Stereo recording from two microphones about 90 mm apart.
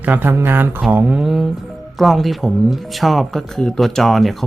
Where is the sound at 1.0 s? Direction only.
5° right (ahead or behind).